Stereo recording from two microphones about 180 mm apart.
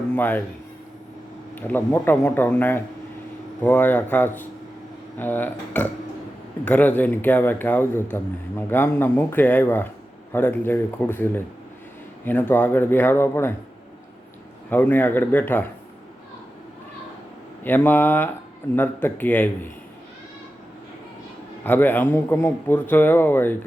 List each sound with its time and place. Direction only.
0.2 s a man's voice: 10° left (ahead or behind)
1.5 s a man's voice: 10° left (ahead or behind)
14.7 s a man's voice: 10° left (ahead or behind)
17.6 s a man's voice: 10° left (ahead or behind)
21.6 s a man's voice: 10° left (ahead or behind)